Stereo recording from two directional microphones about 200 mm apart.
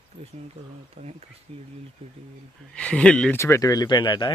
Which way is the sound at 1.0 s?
35° right (ahead or behind).